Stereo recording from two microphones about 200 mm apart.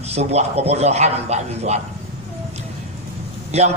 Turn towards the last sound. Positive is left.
turn(degrees=-35)  # may be behind; listen again after turning